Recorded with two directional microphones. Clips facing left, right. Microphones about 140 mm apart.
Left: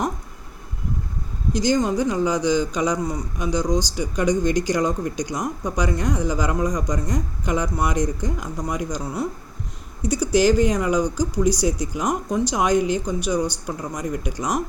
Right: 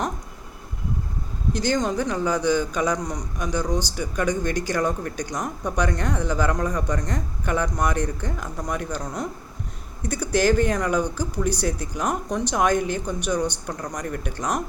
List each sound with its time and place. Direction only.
1.5 s speech: 10° left (ahead or behind)